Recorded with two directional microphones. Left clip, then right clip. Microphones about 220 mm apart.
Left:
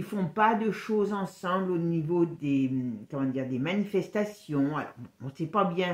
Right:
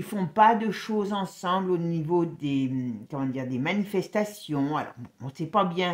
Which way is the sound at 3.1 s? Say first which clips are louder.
Left 1 dB; 40° right (ahead or behind).